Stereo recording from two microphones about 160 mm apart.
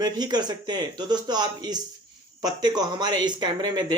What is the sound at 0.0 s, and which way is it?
Speech, 25° right (ahead or behind).